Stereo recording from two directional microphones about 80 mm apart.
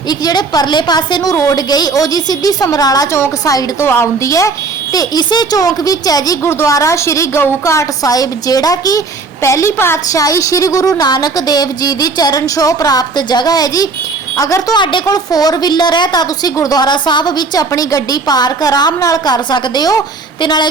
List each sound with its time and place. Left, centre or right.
0.1 s a woman's voice: left
3.8 s a woman's voice: left
6.4 s a woman's voice: left
10.1 s a woman's voice: left
16.6 s a woman's voice: left
17.7 s a woman's voice: left